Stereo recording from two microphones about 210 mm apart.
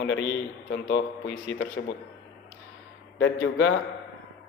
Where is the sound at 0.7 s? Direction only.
55° left (ahead or behind).